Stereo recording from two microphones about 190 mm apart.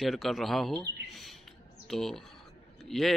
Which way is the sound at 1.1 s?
Centre (ahead or behind).